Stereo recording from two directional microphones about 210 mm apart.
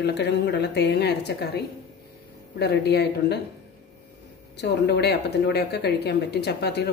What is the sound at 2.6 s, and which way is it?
Speech, 50° left (ahead or behind).